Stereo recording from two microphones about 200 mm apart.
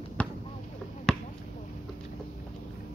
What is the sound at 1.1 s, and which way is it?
Basketball bounce, 5° left (ahead or behind).